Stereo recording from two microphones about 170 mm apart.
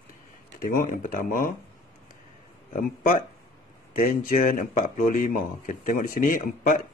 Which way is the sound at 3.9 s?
55° left (ahead or behind).